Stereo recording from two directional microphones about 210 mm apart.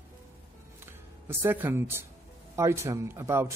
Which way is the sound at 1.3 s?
10° right (ahead or behind).